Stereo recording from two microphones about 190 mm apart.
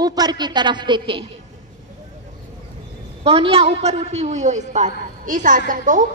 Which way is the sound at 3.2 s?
30° right (ahead or behind).